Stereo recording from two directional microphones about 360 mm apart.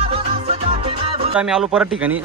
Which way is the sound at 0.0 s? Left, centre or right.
Centre.